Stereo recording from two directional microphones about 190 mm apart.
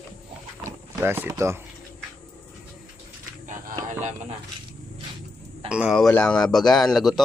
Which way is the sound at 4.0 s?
40° right (ahead or behind).